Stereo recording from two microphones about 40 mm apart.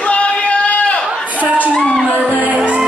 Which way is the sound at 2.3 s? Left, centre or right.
Right.